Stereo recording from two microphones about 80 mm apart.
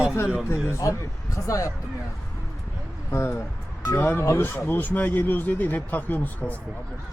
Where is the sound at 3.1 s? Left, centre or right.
Left.